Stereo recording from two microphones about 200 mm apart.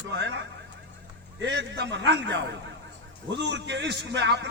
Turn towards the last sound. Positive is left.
turn(degrees=-60)  # may be behind; listen again after turning